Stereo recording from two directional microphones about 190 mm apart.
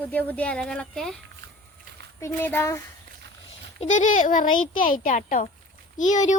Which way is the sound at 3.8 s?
40° left (ahead or behind).